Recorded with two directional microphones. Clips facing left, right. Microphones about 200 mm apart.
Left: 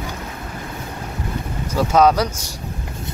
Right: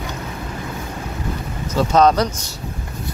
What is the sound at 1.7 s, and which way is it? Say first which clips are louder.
Speech: even; 10° left (ahead or behind).